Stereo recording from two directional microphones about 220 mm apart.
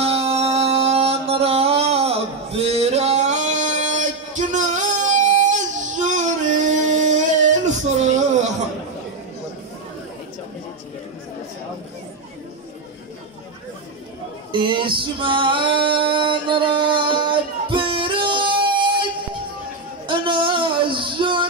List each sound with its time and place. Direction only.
0.0 s music: 25° right (ahead or behind)
14.5 s female singing: 20° right (ahead or behind)
20.1 s a sound: 20° right (ahead or behind)